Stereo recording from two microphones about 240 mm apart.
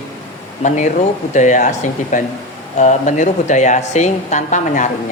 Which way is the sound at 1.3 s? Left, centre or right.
Left.